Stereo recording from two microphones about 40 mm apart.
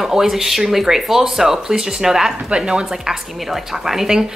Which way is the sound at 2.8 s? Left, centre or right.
Centre.